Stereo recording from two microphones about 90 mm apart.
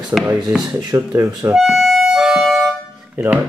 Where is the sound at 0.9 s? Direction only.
35° right (ahead or behind).